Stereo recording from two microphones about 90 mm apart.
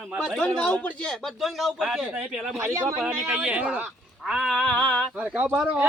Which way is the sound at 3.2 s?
15° right (ahead or behind).